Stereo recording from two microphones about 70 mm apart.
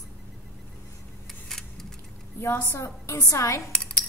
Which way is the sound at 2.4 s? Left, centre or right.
Left.